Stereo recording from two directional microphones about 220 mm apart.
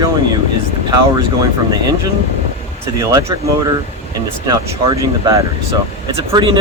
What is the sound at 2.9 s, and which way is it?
Speech, 15° right (ahead or behind).